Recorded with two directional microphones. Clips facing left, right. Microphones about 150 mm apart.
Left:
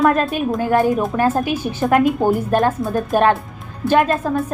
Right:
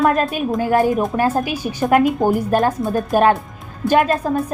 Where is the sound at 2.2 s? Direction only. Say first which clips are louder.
Even; 10° right (ahead or behind).